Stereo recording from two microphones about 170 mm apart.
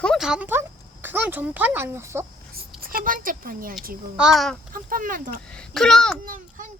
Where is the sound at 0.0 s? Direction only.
Centre (ahead or behind); by 2.2 s 15° right (ahead or behind).